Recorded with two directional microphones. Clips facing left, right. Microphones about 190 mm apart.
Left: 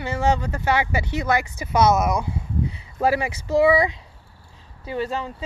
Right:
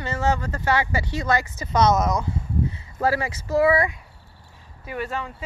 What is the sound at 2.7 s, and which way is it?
Speech, 15° left (ahead or behind).